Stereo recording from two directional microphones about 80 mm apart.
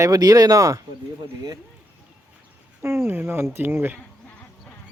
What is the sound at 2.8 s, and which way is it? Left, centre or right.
Speech, right.